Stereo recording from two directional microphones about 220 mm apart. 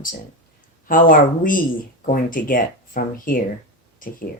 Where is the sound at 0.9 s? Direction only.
40° left (ahead or behind).